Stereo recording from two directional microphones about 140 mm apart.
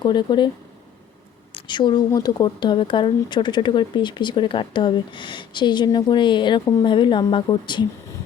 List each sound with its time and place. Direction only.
0.0 s speech: 30° left (ahead or behind)
1.5 s speech: 35° left (ahead or behind)